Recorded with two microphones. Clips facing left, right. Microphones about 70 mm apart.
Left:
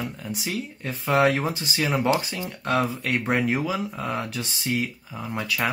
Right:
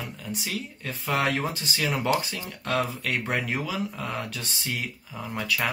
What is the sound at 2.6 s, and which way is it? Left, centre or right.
Speech, centre.